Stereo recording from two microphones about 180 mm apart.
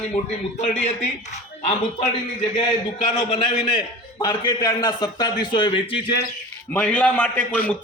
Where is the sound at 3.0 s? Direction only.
25° left (ahead or behind).